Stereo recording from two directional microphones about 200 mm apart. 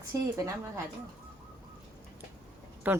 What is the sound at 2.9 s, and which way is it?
Speech, 10° right (ahead or behind).